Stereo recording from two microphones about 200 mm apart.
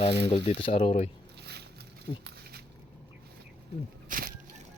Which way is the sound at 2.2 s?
50° right (ahead or behind).